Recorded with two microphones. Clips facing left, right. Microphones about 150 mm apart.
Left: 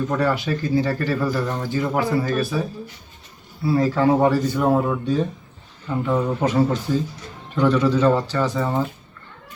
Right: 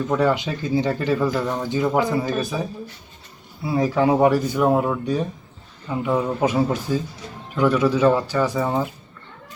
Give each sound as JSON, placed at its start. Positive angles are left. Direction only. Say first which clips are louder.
{"t": 0.2, "sound": "speech", "louder": "right 1 dB", "side_deg": -20}